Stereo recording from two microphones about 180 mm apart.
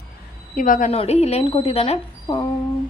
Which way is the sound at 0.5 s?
50° left (ahead or behind).